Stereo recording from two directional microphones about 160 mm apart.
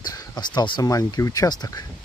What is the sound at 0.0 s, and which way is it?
Speech, 20° left (ahead or behind).